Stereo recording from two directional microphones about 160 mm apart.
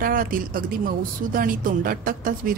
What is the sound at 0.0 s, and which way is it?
A woman's voice, 60° right (ahead or behind).